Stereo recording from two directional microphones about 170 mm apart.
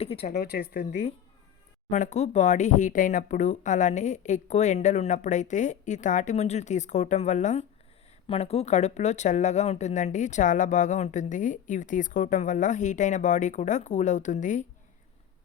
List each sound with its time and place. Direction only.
0.0 s speech: 35° left (ahead or behind)
0.3 s speech: 70° left (ahead or behind)
1.9 s speech: 45° left (ahead or behind)